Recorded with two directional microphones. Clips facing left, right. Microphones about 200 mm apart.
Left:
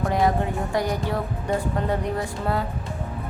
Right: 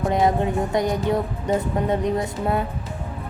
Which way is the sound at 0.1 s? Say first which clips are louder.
Right 3 dB; 20° right (ahead or behind).